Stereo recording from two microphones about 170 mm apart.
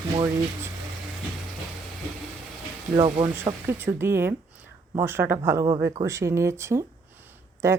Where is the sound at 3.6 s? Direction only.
15° right (ahead or behind).